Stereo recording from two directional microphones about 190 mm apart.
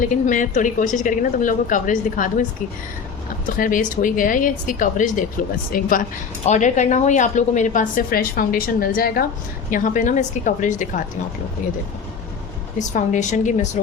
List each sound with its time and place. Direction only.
0.0 s a woman's voice: 45° left (ahead or behind)
3.6 s a woman's voice: 45° left (ahead or behind)
12.8 s speech: 40° left (ahead or behind)